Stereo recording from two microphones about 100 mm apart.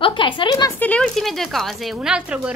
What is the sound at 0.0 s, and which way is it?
Speech, 55° left (ahead or behind).